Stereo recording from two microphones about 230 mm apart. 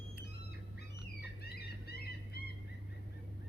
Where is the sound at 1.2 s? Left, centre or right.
Left.